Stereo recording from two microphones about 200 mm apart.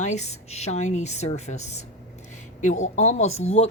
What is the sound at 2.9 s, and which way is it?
Speech, 35° left (ahead or behind).